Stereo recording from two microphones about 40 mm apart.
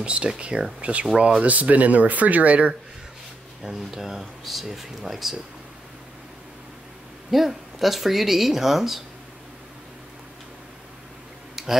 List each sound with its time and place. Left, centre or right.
0.0 s speech: right
3.6 s speech: centre
7.2 s speech: centre
11.5 s tick-tock: centre